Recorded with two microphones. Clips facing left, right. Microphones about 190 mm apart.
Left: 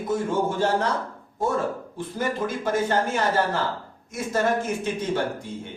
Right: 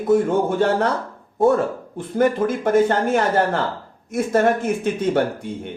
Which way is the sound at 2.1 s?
55° right (ahead or behind).